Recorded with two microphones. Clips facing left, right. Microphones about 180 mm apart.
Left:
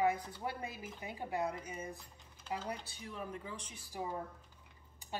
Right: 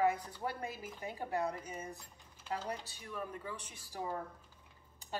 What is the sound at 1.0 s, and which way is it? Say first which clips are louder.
Speech: right 1 dB; 15° left (ahead or behind).